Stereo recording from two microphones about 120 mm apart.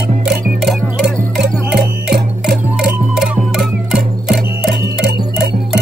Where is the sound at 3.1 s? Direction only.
5° right (ahead or behind).